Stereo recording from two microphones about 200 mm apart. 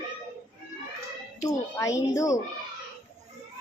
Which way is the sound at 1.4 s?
15° left (ahead or behind).